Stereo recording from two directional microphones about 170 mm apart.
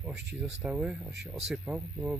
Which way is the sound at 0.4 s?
5° right (ahead or behind).